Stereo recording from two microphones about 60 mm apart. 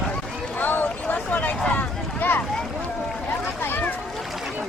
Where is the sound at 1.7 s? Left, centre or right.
Left.